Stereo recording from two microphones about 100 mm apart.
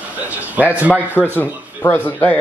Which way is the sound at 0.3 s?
15° right (ahead or behind).